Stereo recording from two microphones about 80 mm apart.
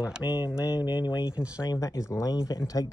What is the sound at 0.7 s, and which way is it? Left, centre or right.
Speech, left.